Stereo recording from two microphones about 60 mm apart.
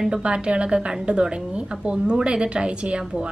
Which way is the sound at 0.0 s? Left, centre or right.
Centre.